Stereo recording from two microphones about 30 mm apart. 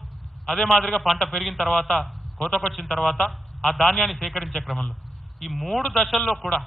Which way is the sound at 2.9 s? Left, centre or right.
Centre.